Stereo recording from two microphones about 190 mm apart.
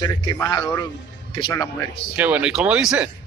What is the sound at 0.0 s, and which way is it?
A man's voice, 20° left (ahead or behind).